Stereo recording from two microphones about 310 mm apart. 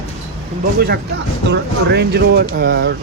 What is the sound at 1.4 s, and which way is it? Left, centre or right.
Speech, right.